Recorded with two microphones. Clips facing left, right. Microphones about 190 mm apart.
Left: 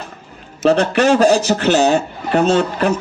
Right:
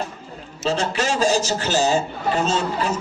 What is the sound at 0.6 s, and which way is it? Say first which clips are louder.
A man's voice: left 9 dB; 60° left (ahead or behind).